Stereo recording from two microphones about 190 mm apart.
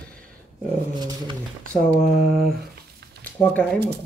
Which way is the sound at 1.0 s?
20° right (ahead or behind).